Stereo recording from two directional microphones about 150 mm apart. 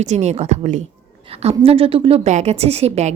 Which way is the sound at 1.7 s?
40° right (ahead or behind).